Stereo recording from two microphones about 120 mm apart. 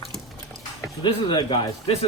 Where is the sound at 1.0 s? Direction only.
40° left (ahead or behind).